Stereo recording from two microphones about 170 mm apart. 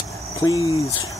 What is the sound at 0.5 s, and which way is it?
Speech, 20° right (ahead or behind).